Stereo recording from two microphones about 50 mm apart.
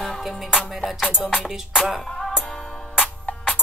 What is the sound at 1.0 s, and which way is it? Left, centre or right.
Music, centre.